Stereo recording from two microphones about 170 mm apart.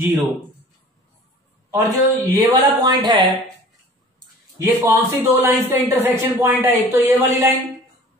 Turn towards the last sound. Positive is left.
turn(degrees=-10)  # may be behind; listen again after turning